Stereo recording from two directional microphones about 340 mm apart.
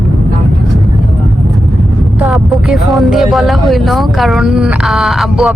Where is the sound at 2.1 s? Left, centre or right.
Centre.